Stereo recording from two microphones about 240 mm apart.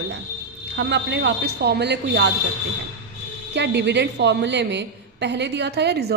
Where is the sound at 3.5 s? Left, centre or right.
Right.